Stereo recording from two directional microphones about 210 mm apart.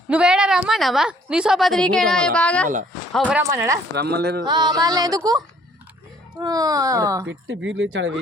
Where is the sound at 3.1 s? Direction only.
Centre (ahead or behind).